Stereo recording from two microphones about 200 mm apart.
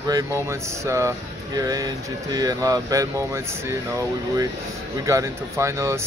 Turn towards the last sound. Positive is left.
turn(degrees=-15)  # may be behind; listen again after turning